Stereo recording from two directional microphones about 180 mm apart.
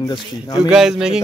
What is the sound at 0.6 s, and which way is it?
Speech, 5° right (ahead or behind).